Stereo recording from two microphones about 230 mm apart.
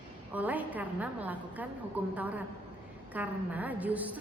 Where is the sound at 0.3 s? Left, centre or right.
Centre.